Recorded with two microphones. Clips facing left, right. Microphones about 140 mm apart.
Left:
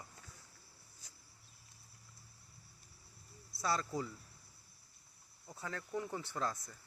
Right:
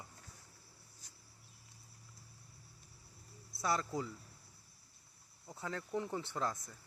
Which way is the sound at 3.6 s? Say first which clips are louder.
Right 1 dB; 20° right (ahead or behind).